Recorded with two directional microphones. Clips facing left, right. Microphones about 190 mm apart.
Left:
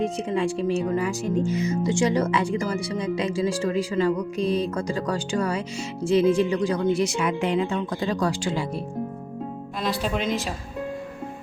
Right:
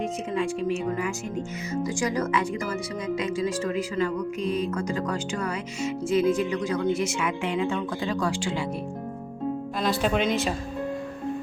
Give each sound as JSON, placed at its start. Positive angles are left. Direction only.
{"t": 0.0, "sound": "speech", "side_deg": 30}
{"t": 10.2, "sound": "speech", "side_deg": 0}